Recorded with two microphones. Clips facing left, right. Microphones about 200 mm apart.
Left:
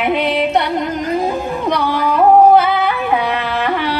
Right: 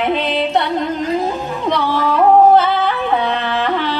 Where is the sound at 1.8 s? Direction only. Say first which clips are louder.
Even; 15° left (ahead or behind).